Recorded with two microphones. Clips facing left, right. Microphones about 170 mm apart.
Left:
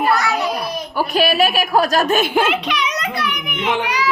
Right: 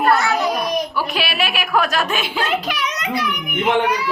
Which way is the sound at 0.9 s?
45° left (ahead or behind).